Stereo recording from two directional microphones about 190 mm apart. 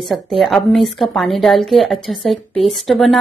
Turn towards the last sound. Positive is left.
turn(degrees=0)  # may be behind; listen again after turning